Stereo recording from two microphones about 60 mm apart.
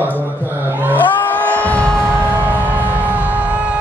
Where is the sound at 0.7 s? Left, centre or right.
Right.